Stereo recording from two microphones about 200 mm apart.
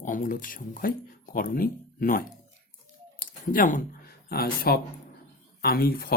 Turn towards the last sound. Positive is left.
turn(degrees=50)  # may be behind; listen again after turning